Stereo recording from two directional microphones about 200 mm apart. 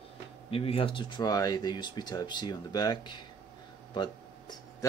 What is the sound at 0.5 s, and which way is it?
Speech, 30° left (ahead or behind).